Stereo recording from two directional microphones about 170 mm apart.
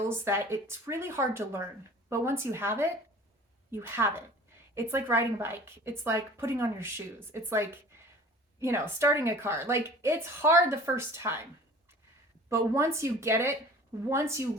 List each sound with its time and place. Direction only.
0.1 s a woman's voice: 15° right (ahead or behind)
12.5 s a woman's voice: 15° right (ahead or behind)